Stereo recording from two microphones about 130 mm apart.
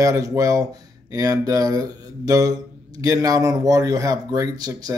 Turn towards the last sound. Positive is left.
turn(degrees=-30)  # may be behind; listen again after turning